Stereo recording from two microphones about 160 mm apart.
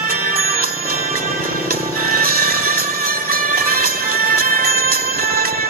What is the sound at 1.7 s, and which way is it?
Music, 65° right (ahead or behind).